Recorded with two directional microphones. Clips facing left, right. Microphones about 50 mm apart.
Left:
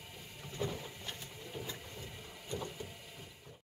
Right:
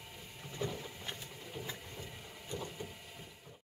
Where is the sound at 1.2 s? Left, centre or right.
Centre.